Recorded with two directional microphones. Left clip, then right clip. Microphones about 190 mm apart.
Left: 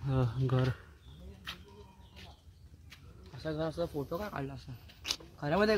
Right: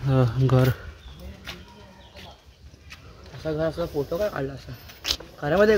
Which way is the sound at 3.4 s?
45° left (ahead or behind).